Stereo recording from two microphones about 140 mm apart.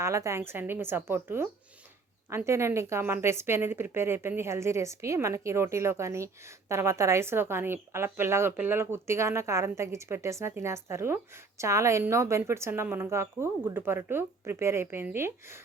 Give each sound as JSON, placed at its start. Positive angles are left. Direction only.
{"t": 0.0, "sound": "a woman's voice", "side_deg": -20}